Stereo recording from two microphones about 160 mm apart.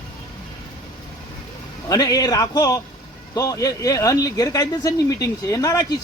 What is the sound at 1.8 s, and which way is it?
Speech, 20° left (ahead or behind).